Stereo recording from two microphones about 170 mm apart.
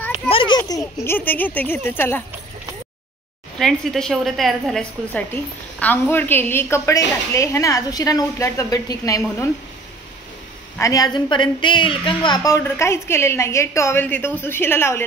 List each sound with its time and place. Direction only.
0.3 s a child's voice: 30° left (ahead or behind); by 2.2 s 10° left (ahead or behind)
3.5 s a woman's voice: centre (ahead or behind); by 9.2 s 20° left (ahead or behind)
10.8 s a woman's voice: 20° left (ahead or behind)